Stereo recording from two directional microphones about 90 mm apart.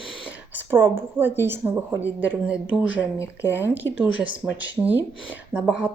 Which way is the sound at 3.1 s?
30° left (ahead or behind).